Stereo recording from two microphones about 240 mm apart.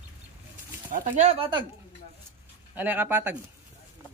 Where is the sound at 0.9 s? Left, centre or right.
Right.